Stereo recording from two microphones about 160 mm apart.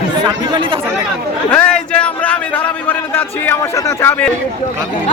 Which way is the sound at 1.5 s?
10° left (ahead or behind).